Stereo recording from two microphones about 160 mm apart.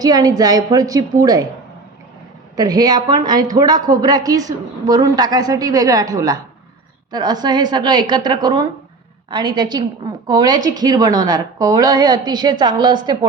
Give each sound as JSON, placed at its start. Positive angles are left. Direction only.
{"t": 0.0, "sound": "a woman's voice", "side_deg": -25}
{"t": 2.6, "sound": "a woman's voice", "side_deg": -25}